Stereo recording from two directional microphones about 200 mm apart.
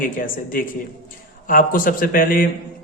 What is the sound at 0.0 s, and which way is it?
Speech, 45° left (ahead or behind).